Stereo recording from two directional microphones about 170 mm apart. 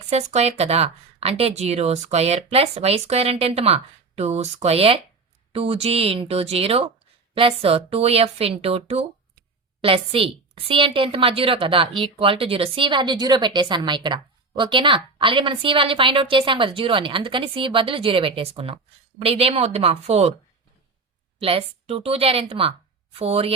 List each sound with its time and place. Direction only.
0.0 s a woman's voice: 40° right (ahead or behind)
21.3 s a woman's voice: 35° right (ahead or behind)